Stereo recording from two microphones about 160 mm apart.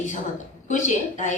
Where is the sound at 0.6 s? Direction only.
50° left (ahead or behind).